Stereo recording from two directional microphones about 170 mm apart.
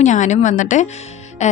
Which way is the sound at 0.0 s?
45° left (ahead or behind).